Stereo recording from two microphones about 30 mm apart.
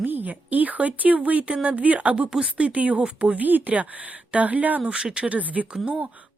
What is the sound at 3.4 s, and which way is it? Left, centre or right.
Speech, right.